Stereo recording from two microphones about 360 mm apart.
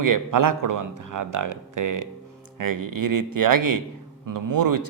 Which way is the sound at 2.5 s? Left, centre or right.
Right.